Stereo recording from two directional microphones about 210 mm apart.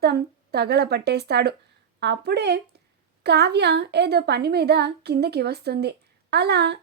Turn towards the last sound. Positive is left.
turn(degrees=-50)  # may be behind; listen again after turning